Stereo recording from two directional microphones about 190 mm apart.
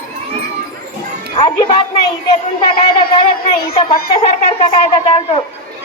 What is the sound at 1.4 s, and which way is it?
Speech, 25° left (ahead or behind).